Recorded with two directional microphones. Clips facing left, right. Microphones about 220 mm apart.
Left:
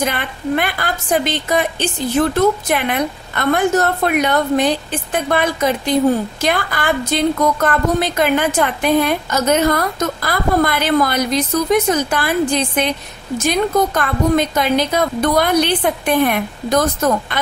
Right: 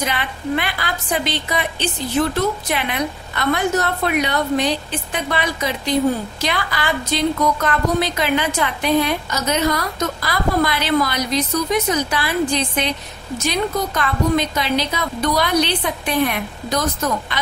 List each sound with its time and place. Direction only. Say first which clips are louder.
0.0 s a woman's voice: left 3 dB; 50° left (ahead or behind)